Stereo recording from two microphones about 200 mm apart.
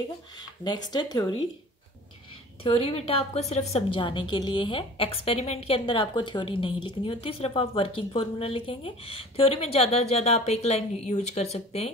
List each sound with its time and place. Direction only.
0.7 s a woman's voice: 20° left (ahead or behind)
2.6 s a woman's voice: 30° left (ahead or behind)